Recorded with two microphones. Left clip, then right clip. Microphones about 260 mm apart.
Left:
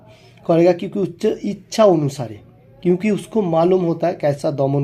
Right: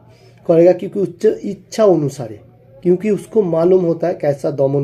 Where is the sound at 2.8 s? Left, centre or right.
Centre.